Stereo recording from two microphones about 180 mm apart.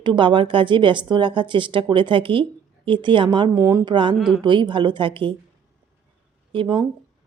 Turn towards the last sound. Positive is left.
turn(degrees=-30)  # may be behind; listen again after turning